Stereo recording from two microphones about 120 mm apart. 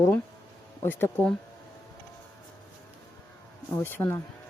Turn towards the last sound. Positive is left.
turn(degrees=20)  # may be behind; listen again after turning